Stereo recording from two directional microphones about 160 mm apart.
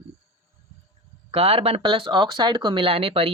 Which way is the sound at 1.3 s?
40° right (ahead or behind).